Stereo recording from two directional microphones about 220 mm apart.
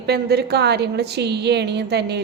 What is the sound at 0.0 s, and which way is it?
A woman's voice, 45° right (ahead or behind).